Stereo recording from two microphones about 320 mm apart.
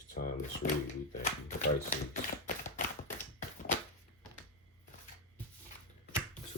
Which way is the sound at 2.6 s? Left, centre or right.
Left.